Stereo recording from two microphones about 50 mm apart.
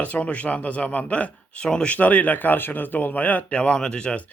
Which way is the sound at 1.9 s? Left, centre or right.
Left.